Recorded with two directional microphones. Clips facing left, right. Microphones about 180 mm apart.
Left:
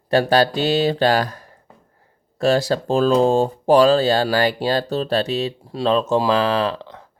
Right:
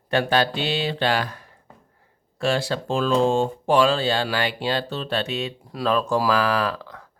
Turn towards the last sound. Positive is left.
turn(degrees=25)  # may be behind; listen again after turning